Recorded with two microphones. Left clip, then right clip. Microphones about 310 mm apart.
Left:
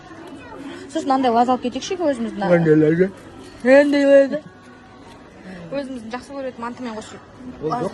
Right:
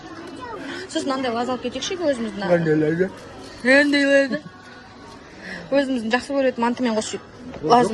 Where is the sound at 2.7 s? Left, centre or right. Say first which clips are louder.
Left 5 dB; left.